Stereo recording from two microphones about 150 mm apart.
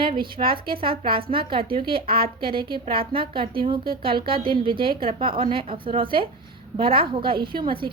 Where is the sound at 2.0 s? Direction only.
85° right.